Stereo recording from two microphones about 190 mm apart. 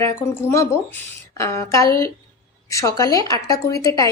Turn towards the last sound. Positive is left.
turn(degrees=20)  # may be behind; listen again after turning